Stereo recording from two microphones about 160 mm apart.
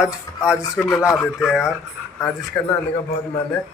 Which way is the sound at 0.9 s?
15° left (ahead or behind).